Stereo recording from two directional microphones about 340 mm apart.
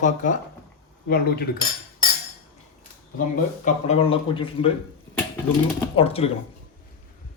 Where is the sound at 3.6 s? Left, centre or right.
Centre.